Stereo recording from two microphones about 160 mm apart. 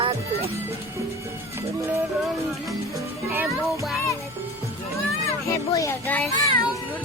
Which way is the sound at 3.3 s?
15° right (ahead or behind).